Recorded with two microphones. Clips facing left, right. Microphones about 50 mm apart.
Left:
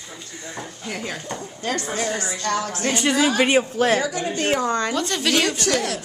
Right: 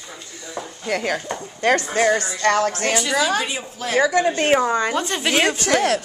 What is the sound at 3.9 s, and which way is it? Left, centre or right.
Speech, right.